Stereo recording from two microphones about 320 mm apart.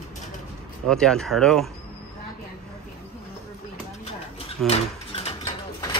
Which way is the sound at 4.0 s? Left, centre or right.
Centre.